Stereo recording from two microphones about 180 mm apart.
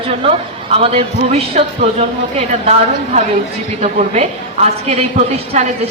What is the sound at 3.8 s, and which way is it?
Speech, 40° right (ahead or behind).